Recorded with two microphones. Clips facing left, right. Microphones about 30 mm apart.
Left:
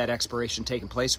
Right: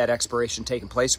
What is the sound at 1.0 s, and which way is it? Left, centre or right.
Speech, centre.